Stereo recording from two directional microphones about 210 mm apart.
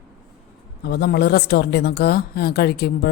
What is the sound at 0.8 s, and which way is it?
Speech, 50° left (ahead or behind).